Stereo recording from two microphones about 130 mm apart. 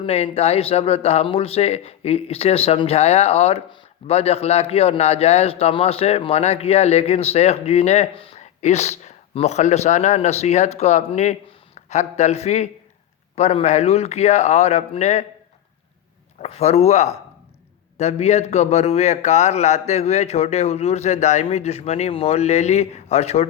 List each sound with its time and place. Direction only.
0.0 s a man's voice: 50° left (ahead or behind)
8.4 s a man's voice: 60° left (ahead or behind)
16.4 s a man's voice: 55° left (ahead or behind)